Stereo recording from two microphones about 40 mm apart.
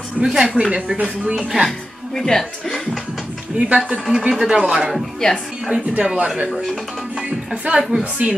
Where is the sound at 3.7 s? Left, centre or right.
Right.